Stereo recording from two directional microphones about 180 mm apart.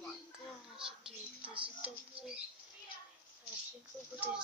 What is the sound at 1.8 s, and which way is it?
Speech, 5° right (ahead or behind).